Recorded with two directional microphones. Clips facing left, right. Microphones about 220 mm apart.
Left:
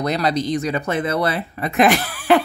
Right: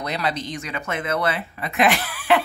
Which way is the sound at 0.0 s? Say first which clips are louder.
Left 6 dB; 40° left (ahead or behind).